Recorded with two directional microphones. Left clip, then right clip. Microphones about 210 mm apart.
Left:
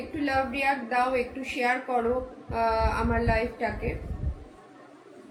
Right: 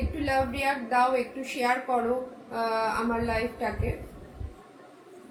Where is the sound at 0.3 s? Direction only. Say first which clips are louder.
Left 1 dB; 15° left (ahead or behind).